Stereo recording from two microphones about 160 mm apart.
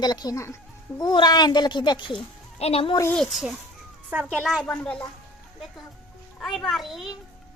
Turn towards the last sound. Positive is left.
turn(degrees=0)  # may be behind; listen again after turning